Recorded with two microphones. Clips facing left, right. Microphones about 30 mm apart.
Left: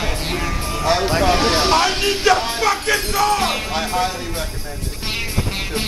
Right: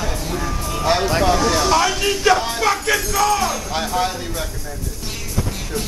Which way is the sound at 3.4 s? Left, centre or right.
Left.